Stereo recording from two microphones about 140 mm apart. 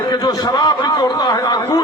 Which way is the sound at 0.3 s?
30° left (ahead or behind).